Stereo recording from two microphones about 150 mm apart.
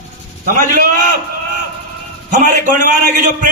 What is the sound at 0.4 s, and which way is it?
Speech, 65° right (ahead or behind).